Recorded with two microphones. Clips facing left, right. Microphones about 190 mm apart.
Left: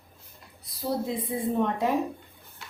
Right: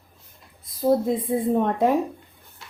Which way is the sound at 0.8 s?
50° right (ahead or behind).